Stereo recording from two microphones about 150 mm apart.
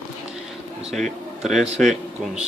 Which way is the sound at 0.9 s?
Centre (ahead or behind).